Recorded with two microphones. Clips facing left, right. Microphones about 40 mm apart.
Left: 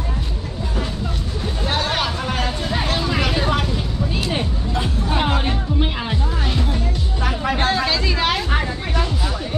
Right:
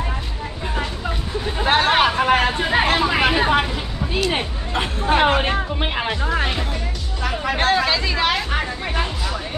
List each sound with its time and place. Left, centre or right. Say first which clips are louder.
1.6 s vehicle: right 6 dB; right
4.7 s speech: right 4 dB; right
6.2 s music: right 4 dB; right
7.5 s chatter: right 3 dB; centre